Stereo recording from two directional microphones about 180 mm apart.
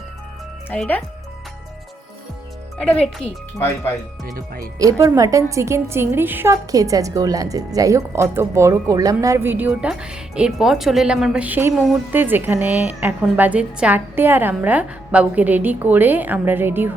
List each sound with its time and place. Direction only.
0.7 s speech: 10° left (ahead or behind)
2.8 s speech: 5° left (ahead or behind)
4.4 s speech: 50° right (ahead or behind)
4.8 s a woman's voice: 20° right (ahead or behind)